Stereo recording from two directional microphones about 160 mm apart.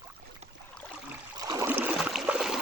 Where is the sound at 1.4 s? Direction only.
20° right (ahead or behind).